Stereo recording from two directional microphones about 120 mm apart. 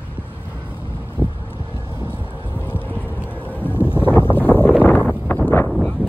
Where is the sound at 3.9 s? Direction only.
20° left (ahead or behind).